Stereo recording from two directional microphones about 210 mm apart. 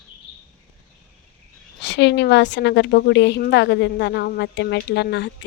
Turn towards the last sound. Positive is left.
turn(degrees=60)  # may be behind; listen again after turning